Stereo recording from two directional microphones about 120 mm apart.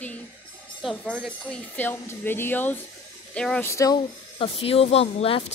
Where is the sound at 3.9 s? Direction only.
50° left (ahead or behind).